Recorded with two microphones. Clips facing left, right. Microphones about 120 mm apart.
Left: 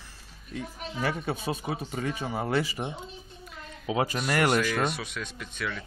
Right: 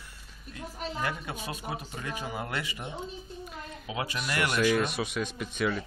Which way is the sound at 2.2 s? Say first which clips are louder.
Left 7 dB; 30° left (ahead or behind).